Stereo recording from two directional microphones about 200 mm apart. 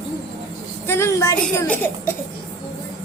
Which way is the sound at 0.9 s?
15° left (ahead or behind).